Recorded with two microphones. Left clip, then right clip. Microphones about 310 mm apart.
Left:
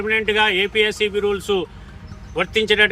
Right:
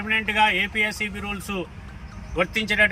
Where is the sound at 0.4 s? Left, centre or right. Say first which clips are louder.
Left 4 dB; centre.